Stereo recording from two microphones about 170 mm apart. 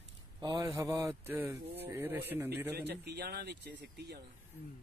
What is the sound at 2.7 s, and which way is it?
Speech, 75° right (ahead or behind).